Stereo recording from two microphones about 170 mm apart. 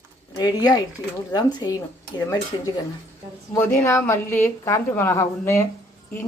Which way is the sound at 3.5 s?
15° left (ahead or behind).